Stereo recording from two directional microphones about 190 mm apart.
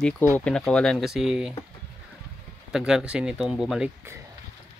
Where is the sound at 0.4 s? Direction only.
5° left (ahead or behind).